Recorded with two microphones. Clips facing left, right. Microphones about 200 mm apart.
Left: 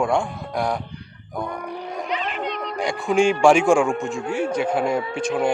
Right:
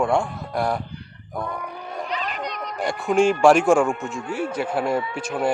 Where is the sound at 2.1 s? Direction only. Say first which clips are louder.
Left 3 dB; 40° right (ahead or behind).